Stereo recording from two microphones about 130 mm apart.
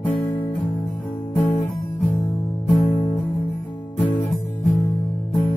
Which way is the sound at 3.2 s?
15° left (ahead or behind).